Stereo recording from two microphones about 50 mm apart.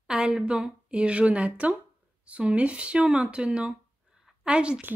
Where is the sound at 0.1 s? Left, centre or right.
Centre.